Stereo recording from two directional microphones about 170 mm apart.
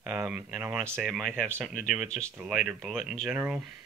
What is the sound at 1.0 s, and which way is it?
Speech, centre (ahead or behind).